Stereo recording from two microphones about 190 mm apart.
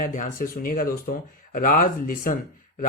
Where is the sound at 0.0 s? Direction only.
40° left (ahead or behind).